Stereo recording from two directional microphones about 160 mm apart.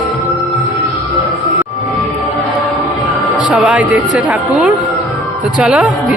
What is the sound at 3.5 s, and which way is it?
Speech, 10° right (ahead or behind).